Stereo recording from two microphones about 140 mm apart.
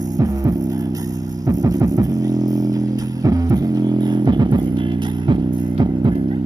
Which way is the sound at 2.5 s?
25° right (ahead or behind).